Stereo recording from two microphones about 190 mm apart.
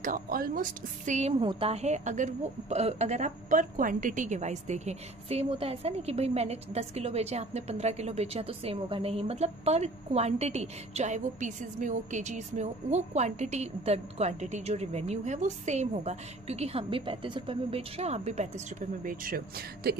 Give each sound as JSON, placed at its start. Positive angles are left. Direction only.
{"t": 0.0, "sound": "a woman's voice", "side_deg": -45}